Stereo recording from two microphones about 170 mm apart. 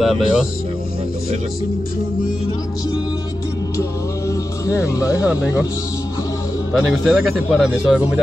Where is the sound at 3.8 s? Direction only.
20° left (ahead or behind).